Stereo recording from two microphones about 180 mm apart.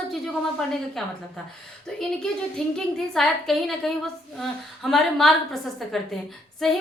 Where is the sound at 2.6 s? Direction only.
5° left (ahead or behind).